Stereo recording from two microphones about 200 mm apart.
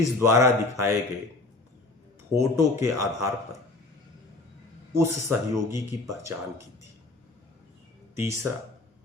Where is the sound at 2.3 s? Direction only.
15° right (ahead or behind).